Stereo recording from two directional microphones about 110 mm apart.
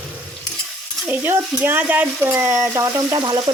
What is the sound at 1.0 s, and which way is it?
Speech, 15° right (ahead or behind).